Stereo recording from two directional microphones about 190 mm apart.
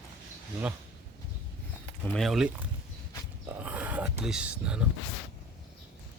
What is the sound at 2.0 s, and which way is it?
Speech, 5° left (ahead or behind).